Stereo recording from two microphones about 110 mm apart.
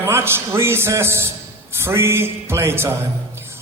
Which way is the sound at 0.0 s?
20° right (ahead or behind).